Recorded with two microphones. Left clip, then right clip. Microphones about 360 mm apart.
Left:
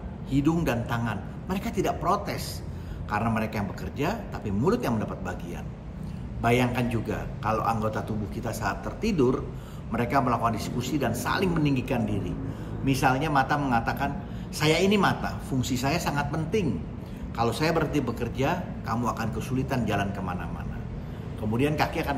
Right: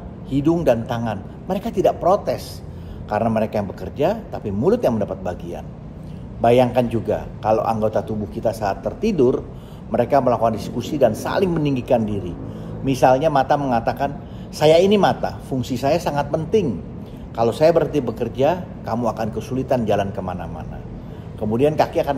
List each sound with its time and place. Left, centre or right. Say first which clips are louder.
0.3 s a man's voice: right 9 dB; centre
21.5 s a man's voice: right 9 dB; centre